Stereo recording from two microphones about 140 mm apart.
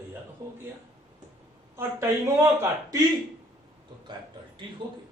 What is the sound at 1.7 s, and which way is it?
A man's voice, 20° right (ahead or behind).